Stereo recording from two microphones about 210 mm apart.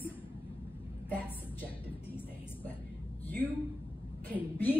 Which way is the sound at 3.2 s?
10° left (ahead or behind).